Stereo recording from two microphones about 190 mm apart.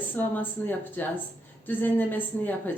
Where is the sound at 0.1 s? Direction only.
10° left (ahead or behind).